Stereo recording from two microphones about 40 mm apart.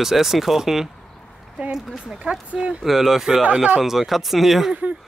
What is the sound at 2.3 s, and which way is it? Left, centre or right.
Speech, right.